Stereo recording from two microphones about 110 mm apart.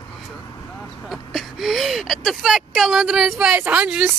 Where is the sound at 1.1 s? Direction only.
Centre (ahead or behind).